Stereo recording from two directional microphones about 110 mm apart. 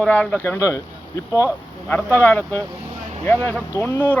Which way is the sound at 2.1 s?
20° left (ahead or behind).